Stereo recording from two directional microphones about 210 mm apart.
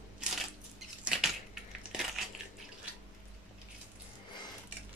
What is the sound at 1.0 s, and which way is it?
Crushing, centre (ahead or behind).